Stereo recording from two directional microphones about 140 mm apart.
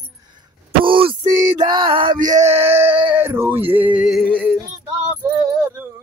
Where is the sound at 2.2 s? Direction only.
65° right (ahead or behind).